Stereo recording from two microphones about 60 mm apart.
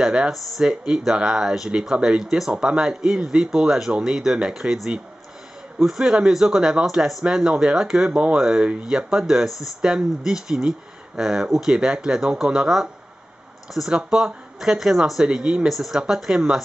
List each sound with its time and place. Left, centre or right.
0.0 s speech: centre